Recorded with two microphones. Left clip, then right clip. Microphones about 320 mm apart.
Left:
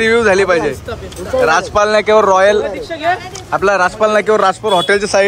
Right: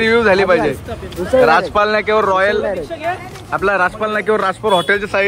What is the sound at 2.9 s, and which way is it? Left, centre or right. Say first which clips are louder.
Speech: left 5 dB; left.